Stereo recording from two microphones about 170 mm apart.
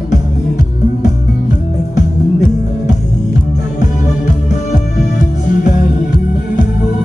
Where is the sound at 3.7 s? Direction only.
45° left (ahead or behind).